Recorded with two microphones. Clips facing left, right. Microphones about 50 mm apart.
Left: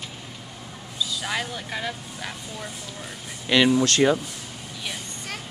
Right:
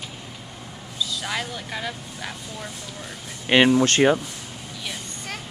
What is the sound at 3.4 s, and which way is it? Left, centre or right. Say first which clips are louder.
Speech: right 2 dB; right.